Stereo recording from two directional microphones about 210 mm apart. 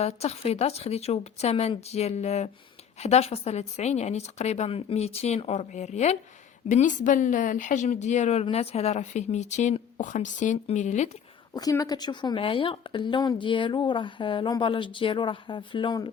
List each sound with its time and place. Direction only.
0.0 s a woman's voice: 30° left (ahead or behind)
11.5 s speech: 15° left (ahead or behind)